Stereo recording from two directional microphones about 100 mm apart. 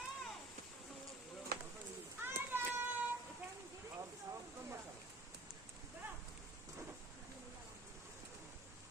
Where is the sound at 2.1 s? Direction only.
20° right (ahead or behind).